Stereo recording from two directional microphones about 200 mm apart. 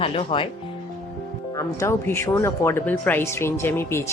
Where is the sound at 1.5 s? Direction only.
15° left (ahead or behind).